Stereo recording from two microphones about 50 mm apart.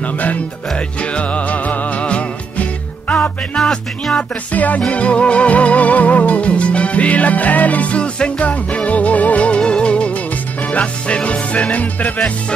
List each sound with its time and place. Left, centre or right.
0.0 s music: left
3.6 s speech: centre
4.2 s music: left